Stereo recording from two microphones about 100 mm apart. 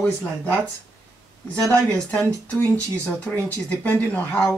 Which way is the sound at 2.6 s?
15° left (ahead or behind).